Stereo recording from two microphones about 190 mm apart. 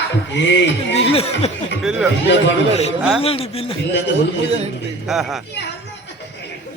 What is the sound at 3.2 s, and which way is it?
Speech, 30° left (ahead or behind).